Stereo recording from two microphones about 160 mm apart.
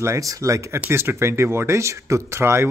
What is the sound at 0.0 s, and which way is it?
Speech, 20° right (ahead or behind).